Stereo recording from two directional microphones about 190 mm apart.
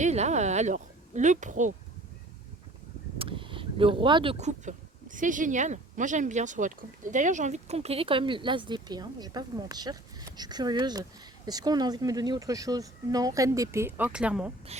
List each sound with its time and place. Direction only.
0.0 s a woman's voice: 35° right (ahead or behind)
3.2 s speech: 25° right (ahead or behind); by 14.5 s 5° right (ahead or behind)
14.7 s speech: 35° right (ahead or behind)